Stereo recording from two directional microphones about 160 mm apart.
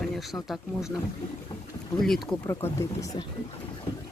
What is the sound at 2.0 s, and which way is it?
Speech, centre (ahead or behind).